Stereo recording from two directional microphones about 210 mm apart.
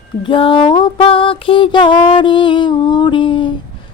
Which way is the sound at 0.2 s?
25° left (ahead or behind).